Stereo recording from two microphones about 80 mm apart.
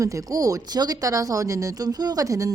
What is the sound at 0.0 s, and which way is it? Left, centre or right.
Speech, right.